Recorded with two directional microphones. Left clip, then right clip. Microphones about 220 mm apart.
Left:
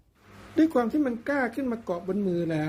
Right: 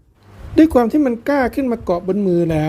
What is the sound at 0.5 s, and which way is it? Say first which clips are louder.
A woman's voice: right 11 dB; 35° right (ahead or behind).